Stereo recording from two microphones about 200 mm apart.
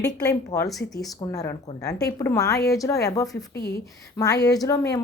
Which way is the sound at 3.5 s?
55° left (ahead or behind).